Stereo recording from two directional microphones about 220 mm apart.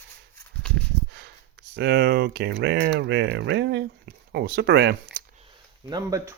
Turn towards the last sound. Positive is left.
turn(degrees=-15)  # may be behind; listen again after turning